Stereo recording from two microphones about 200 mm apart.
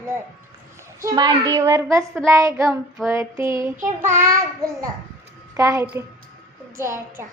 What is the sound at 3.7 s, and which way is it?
Child singing, 40° right (ahead or behind).